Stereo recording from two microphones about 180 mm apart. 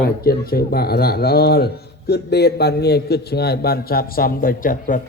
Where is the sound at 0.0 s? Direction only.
60° left (ahead or behind).